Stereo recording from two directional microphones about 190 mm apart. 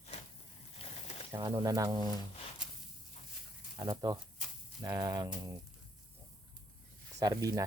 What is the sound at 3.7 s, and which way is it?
Speech, 20° right (ahead or behind).